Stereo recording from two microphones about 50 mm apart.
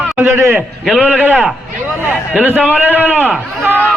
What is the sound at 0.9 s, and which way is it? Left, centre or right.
A man's voice, right.